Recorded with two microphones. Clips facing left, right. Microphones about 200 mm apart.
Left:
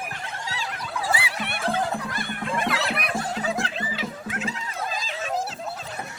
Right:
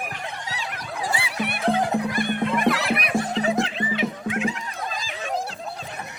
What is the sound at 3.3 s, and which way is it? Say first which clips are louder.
Music: right 5 dB; 20° right (ahead or behind).